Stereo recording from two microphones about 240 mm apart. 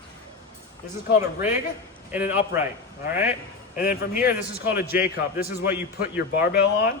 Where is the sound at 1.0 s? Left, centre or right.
Left.